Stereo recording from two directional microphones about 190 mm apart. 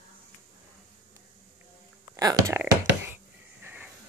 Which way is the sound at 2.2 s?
20° right (ahead or behind).